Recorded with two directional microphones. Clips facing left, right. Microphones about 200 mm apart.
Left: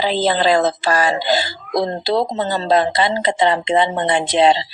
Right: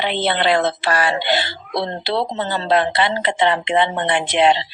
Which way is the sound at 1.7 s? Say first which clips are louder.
Left 4 dB; 40° left (ahead or behind).